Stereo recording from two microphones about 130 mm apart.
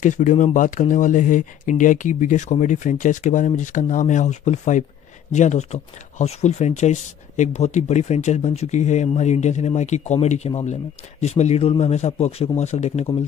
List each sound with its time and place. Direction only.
0.0 s speech: 70° left (ahead or behind)